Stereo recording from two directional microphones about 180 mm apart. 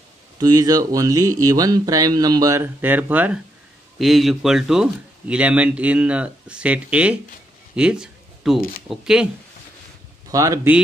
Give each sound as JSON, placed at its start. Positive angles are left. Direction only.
{"t": 0.4, "sound": "speech", "side_deg": -20}
{"t": 7.7, "sound": "a sound", "side_deg": -5}
{"t": 8.5, "sound": "speech", "side_deg": 55}
{"t": 8.8, "sound": "speech", "side_deg": -5}
{"t": 10.3, "sound": "speech", "side_deg": -20}